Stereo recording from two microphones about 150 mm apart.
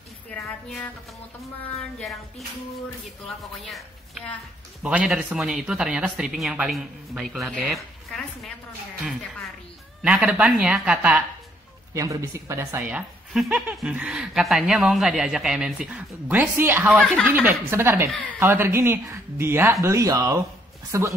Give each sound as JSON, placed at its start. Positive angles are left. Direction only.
{"t": 0.3, "sound": "music", "side_deg": 5}
{"t": 2.0, "sound": "speech", "side_deg": 0}
{"t": 10.0, "sound": "speech", "side_deg": -5}
{"t": 11.9, "sound": "speech", "side_deg": -20}